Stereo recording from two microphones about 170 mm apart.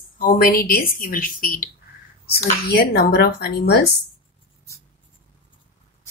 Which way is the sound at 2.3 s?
70° left (ahead or behind).